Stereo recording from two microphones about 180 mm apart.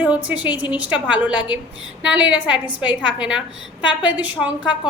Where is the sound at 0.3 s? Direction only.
10° right (ahead or behind).